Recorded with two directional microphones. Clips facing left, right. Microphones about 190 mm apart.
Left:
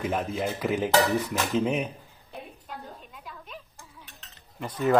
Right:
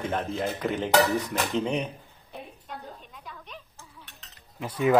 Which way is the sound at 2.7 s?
Centre (ahead or behind).